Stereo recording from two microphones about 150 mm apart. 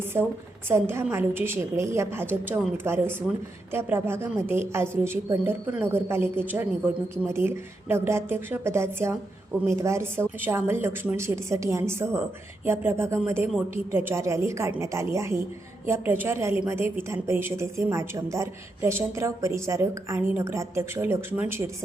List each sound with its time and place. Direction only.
0.1 s a woman's voice: 15° right (ahead or behind)